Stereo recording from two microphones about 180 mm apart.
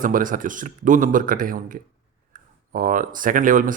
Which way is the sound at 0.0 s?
50° right (ahead or behind).